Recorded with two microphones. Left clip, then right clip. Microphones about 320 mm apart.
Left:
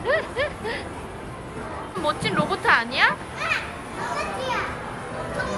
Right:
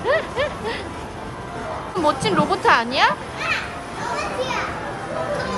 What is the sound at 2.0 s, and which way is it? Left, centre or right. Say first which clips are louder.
Speech: right 5 dB; centre.